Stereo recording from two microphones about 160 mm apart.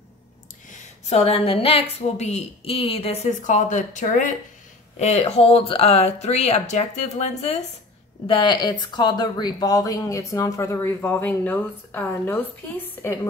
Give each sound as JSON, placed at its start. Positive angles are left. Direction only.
{"t": 0.7, "sound": "a woman's voice", "side_deg": 45}
{"t": 8.3, "sound": "a woman's voice", "side_deg": 30}